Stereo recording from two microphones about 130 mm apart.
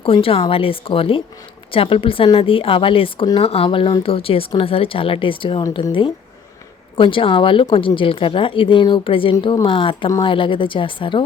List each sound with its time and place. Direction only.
0.0 s a woman's voice: 45° left (ahead or behind)